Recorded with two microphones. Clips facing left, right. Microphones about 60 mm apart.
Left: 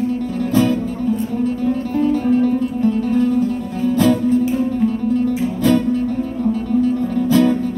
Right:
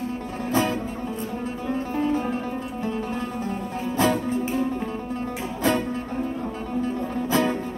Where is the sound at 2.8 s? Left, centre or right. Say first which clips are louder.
Left 11 dB; right.